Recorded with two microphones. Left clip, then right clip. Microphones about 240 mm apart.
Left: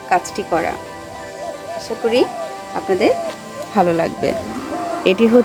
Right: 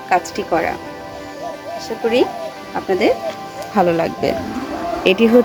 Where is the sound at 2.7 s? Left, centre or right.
Centre.